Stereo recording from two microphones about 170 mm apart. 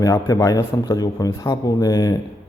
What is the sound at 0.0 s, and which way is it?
Speech, 20° left (ahead or behind).